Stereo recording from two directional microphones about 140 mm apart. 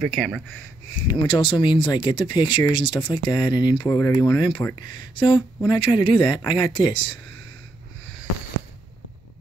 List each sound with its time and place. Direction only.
0.0 s speech: centre (ahead or behind)
0.9 s speech: 35° left (ahead or behind)